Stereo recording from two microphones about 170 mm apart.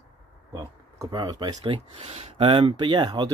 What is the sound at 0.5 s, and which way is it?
Speech, 20° right (ahead or behind).